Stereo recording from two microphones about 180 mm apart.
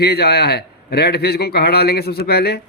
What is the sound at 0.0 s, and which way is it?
A man's voice, 60° left (ahead or behind).